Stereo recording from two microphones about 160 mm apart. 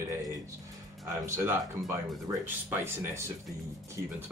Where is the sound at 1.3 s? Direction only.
15° right (ahead or behind).